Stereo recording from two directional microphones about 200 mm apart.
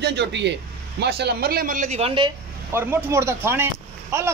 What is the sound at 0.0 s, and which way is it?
Speech, 60° right (ahead or behind).